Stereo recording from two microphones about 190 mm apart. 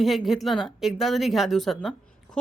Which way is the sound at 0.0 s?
Centre (ahead or behind).